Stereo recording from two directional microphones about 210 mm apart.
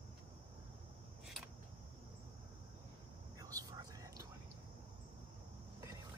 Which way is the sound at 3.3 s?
15° right (ahead or behind).